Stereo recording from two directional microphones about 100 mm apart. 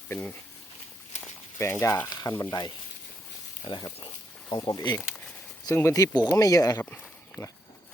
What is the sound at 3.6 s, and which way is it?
Speech, 45° left (ahead or behind).